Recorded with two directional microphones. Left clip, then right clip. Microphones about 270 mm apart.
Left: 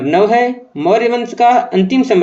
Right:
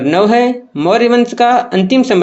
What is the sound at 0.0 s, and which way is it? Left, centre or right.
Speech, right.